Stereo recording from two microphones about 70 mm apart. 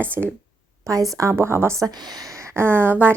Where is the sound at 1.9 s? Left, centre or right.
Right.